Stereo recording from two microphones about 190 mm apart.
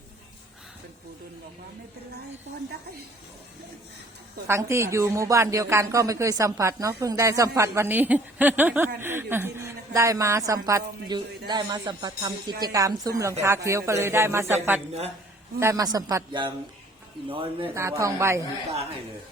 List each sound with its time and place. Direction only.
4.4 s speech: 15° right (ahead or behind)
17.7 s speech: 15° right (ahead or behind)